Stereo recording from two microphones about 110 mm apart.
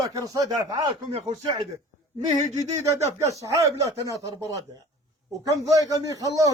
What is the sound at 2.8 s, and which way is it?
A man's voice, 30° right (ahead or behind).